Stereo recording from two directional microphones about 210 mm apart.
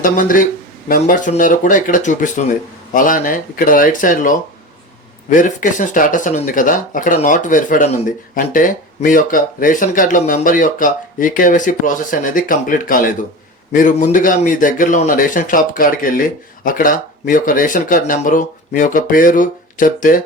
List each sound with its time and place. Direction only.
0.0 s speech: 40° left (ahead or behind)